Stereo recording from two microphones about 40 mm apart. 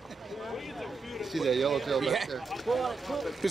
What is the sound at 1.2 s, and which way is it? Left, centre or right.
Speech, centre.